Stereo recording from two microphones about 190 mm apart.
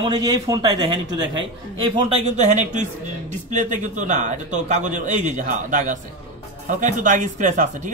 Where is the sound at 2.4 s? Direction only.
40° right (ahead or behind).